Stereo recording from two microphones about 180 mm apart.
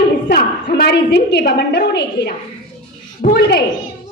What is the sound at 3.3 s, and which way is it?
Speech, 65° left (ahead or behind).